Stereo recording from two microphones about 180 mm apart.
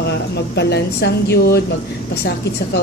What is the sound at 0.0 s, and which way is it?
A woman's voice, 70° left (ahead or behind).